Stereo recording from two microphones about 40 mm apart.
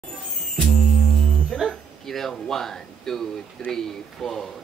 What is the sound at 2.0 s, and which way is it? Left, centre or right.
Speech, centre.